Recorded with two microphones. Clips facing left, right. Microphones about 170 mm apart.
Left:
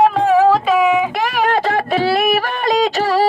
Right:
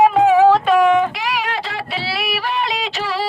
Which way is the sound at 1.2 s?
50° left (ahead or behind).